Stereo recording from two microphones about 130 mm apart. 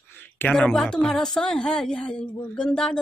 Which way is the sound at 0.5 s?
5° left (ahead or behind).